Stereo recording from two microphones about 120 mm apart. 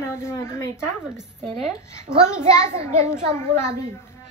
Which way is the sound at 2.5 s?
25° left (ahead or behind).